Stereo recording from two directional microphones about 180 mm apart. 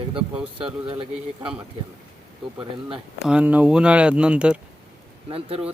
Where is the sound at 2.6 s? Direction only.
5° right (ahead or behind).